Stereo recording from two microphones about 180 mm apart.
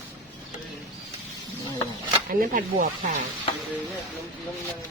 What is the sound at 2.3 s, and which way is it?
Speech, 50° right (ahead or behind).